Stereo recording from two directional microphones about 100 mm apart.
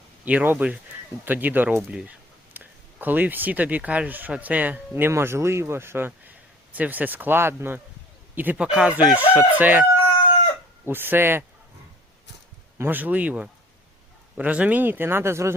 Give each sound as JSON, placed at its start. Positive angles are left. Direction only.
{"t": 0.3, "sound": "speech", "side_deg": -15}
{"t": 10.8, "sound": "speech", "side_deg": -20}
{"t": 12.8, "sound": "speech", "side_deg": -20}